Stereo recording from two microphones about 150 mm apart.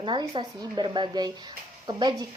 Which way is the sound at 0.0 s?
30° right (ahead or behind).